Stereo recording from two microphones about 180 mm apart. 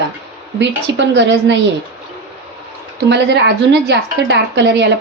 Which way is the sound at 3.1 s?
70° right (ahead or behind).